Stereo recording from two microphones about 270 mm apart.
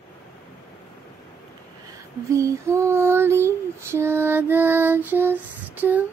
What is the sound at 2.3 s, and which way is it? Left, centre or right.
Female singing, centre.